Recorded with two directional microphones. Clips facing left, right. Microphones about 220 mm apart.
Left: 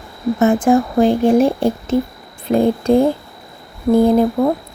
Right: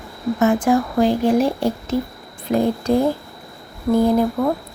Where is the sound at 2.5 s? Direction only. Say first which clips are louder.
Left 4 dB; 30° left (ahead or behind).